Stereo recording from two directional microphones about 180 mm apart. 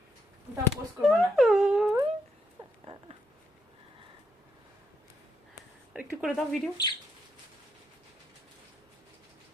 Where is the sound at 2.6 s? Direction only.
30° right (ahead or behind).